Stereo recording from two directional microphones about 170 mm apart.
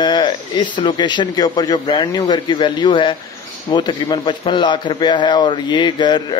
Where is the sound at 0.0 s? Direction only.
25° left (ahead or behind).